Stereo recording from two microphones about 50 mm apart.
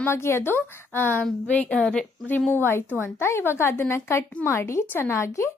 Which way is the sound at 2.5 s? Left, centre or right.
Left.